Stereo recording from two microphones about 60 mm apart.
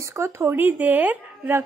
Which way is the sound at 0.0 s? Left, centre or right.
Right.